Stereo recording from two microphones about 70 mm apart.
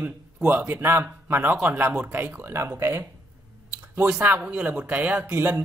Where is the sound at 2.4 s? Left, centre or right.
Right.